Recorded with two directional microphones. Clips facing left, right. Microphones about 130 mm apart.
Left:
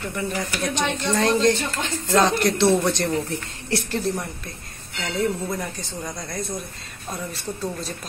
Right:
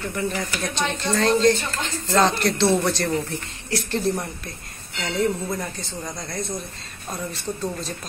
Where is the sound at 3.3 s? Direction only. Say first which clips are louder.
Left 2 dB; 30° left (ahead or behind).